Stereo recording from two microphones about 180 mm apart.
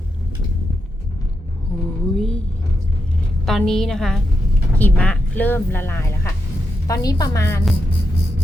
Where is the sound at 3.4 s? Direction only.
Centre (ahead or behind).